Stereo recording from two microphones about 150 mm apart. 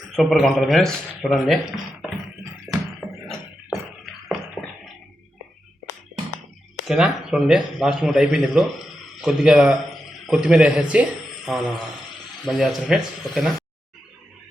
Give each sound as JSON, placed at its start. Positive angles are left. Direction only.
{"t": 0.2, "sound": "a man's voice", "side_deg": 0}
{"t": 2.7, "sound": "music", "side_deg": 20}
{"t": 3.2, "sound": "a sound", "side_deg": 0}
{"t": 6.8, "sound": "a man's voice", "side_deg": -5}